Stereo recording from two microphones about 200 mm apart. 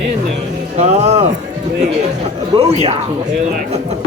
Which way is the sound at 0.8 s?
35° right (ahead or behind).